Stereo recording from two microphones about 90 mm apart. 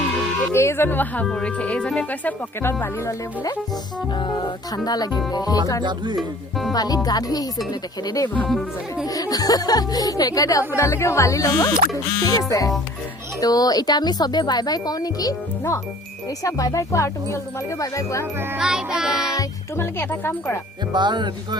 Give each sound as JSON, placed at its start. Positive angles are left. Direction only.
{"t": 0.5, "sound": "speech", "side_deg": 30}
{"t": 2.8, "sound": "speech", "side_deg": 35}
{"t": 4.1, "sound": "speech", "side_deg": 60}
{"t": 5.8, "sound": "music", "side_deg": -55}
{"t": 6.1, "sound": "speech", "side_deg": 0}
{"t": 6.7, "sound": "speech", "side_deg": 45}
{"t": 10.8, "sound": "speech", "side_deg": 30}
{"t": 18.6, "sound": "music", "side_deg": -5}
{"t": 19.7, "sound": "speech", "side_deg": 25}
{"t": 20.9, "sound": "music", "side_deg": -55}